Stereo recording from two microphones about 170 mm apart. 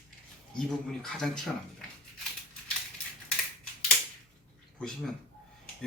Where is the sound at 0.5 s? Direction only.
5° left (ahead or behind).